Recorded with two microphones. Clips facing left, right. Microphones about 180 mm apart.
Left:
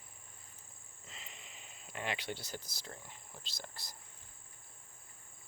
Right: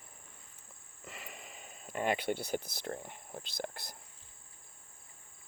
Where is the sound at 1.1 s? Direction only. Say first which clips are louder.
Right 7 dB; 60° right (ahead or behind).